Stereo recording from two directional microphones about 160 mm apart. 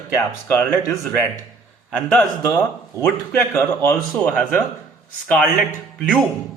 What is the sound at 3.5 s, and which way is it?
Speech, 15° left (ahead or behind).